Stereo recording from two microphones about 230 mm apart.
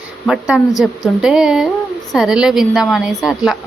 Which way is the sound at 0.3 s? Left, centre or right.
Centre.